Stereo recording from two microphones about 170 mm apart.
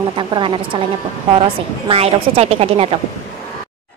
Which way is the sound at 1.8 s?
35° right (ahead or behind).